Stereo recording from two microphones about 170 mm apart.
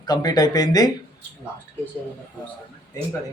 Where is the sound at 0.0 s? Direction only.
25° left (ahead or behind).